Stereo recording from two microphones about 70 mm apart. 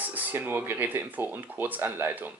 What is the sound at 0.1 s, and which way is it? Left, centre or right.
Speech, right.